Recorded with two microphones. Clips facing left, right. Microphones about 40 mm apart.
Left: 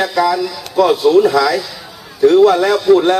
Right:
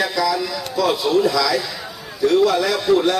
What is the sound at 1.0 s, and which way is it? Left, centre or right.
A man's voice, left.